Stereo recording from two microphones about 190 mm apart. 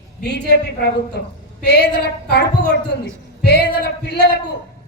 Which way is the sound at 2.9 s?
60° left (ahead or behind).